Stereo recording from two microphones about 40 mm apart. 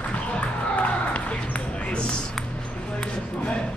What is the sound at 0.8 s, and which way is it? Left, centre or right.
Music, left.